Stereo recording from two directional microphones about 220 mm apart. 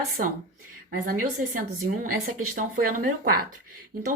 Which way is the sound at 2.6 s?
40° right (ahead or behind).